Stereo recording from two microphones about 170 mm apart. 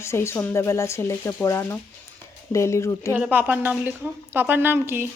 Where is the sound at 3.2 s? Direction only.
10° right (ahead or behind).